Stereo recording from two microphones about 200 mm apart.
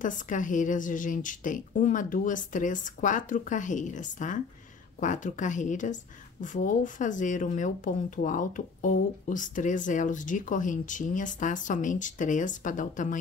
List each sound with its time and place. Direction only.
0.0 s speech: 40° left (ahead or behind)